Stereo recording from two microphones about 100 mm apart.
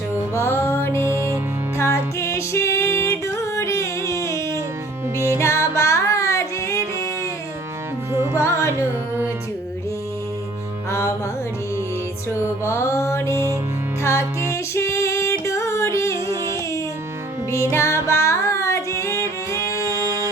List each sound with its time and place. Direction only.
0.3 s music: 25° left (ahead or behind)
1.0 s music: 30° right (ahead or behind)
1.8 s music: 30° left (ahead or behind)
8.1 s music: 25° right (ahead or behind)
12.3 s music: 25° left (ahead or behind)
14.5 s female singing: 30° left (ahead or behind)
17.5 s music: 30° left (ahead or behind)
18.1 s carnatic music: 30° left (ahead or behind)
19.2 s music: 30° right (ahead or behind)